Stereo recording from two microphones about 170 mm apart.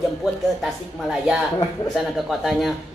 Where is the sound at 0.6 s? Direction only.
5° right (ahead or behind).